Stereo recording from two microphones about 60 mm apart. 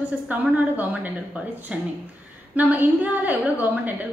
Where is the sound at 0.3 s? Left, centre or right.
Right.